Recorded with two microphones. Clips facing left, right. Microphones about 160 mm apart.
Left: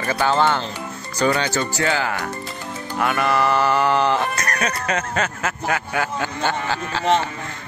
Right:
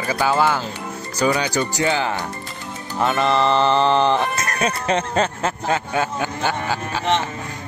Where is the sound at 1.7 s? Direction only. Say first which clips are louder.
Right 1 dB; 20° right (ahead or behind).